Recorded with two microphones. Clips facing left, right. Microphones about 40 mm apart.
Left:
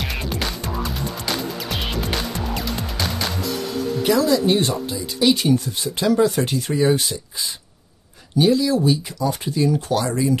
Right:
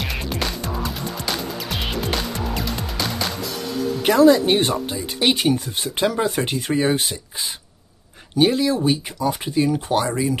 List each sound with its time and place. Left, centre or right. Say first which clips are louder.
0.0 s music: even; centre
4.0 s speech: right 4 dB; right